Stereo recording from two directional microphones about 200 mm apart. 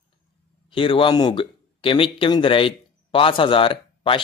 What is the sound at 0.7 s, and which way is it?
Speech, 25° left (ahead or behind).